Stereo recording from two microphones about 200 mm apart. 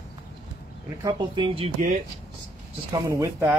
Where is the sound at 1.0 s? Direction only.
25° right (ahead or behind).